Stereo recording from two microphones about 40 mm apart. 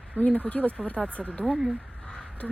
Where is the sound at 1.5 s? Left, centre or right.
Centre.